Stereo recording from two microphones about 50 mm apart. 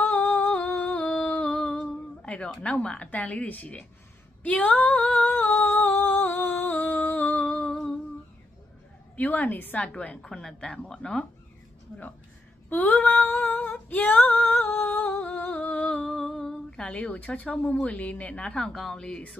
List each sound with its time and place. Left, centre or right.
0.0 s humming: left
2.6 s a woman's voice: left
4.4 s female singing: left
5.6 s a sound: left
6.2 s music: left
9.1 s a woman's voice: left
9.8 s a woman's voice: centre
12.6 s female singing: left
15.5 s humming: left
18.8 s a woman's voice: centre